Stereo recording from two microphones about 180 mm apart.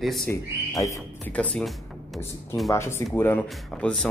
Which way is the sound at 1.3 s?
5° left (ahead or behind).